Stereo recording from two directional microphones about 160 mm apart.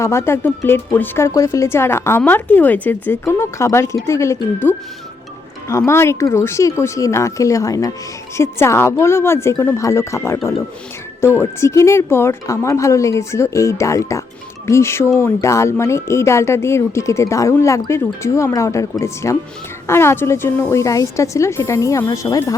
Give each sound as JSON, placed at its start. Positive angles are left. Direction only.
{"t": 0.0, "sound": "a woman's voice", "side_deg": 15}